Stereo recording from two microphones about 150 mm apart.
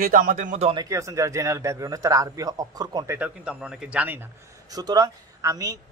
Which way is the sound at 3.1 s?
10° right (ahead or behind).